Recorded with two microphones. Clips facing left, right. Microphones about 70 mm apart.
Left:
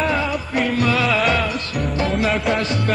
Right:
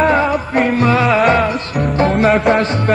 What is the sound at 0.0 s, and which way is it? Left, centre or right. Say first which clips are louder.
Music: right 7 dB; right.